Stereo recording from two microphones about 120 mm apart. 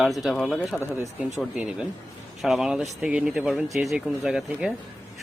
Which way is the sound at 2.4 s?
5° right (ahead or behind).